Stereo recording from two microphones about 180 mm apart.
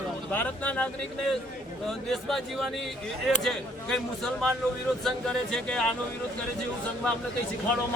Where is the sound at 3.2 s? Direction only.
Centre (ahead or behind).